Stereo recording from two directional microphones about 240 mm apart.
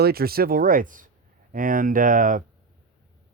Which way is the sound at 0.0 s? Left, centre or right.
Right.